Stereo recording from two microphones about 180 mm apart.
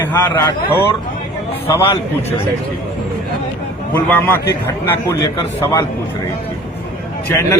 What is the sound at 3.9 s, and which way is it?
A man's voice, 10° left (ahead or behind).